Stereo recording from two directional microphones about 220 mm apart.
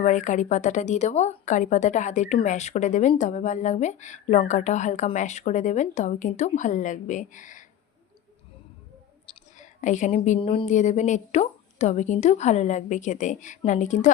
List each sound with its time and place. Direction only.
0.0 s speech: 35° left (ahead or behind)
9.2 s speech: 30° left (ahead or behind)